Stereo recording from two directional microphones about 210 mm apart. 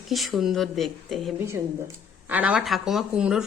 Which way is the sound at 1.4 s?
10° right (ahead or behind).